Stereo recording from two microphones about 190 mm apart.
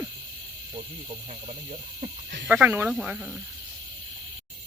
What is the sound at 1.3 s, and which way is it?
Speech, 35° right (ahead or behind).